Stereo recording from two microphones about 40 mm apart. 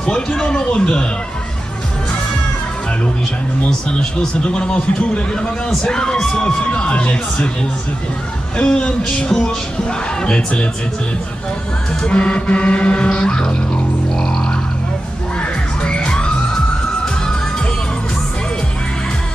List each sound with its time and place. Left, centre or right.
0.0 s speech: centre
4.4 s speech: left
6.4 s speech: left
8.5 s speech: left
12.1 s speech: left
14.1 s music: centre
15.8 s music: left